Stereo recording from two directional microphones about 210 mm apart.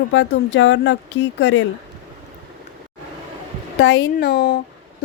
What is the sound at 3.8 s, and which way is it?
Speech, 55° left (ahead or behind).